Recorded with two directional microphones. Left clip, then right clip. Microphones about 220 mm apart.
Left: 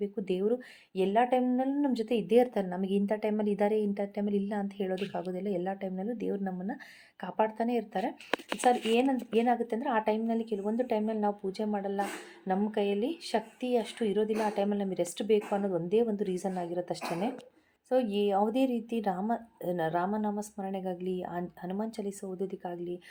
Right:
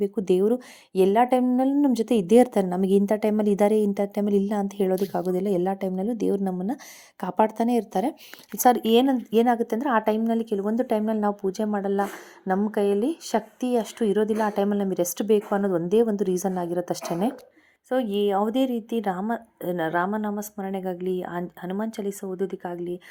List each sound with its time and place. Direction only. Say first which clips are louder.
0.0 s a woman's voice: right 9 dB; 35° right (ahead or behind)
17.8 s a woman's voice: right 4 dB; 20° right (ahead or behind)